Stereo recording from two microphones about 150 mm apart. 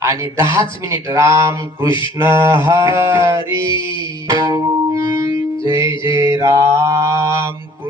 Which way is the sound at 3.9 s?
35° left (ahead or behind).